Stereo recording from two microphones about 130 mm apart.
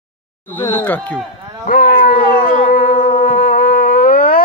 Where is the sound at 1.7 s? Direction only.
90° left.